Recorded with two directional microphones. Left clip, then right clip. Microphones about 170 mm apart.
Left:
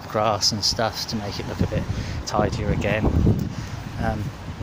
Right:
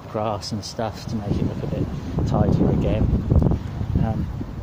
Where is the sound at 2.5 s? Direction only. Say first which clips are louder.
Right 2 dB; 10° right (ahead or behind).